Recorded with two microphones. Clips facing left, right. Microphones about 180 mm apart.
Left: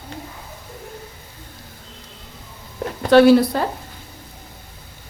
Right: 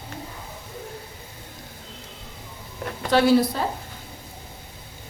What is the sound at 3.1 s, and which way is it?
Speech, 70° left (ahead or behind).